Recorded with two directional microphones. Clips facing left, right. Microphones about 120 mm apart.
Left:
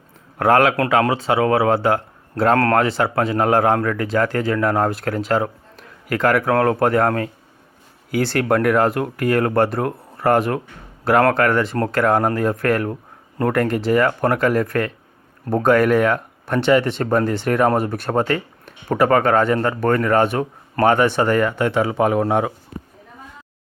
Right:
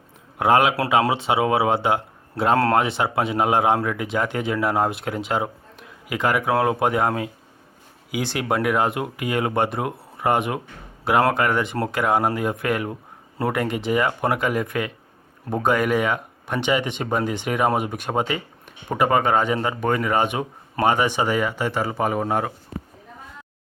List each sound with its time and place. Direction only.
0.3 s speech: 15° right (ahead or behind)
4.9 s speech: 20° right (ahead or behind)
5.1 s speech: 10° right (ahead or behind)